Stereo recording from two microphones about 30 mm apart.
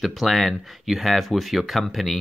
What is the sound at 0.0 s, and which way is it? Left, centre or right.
Speech, centre.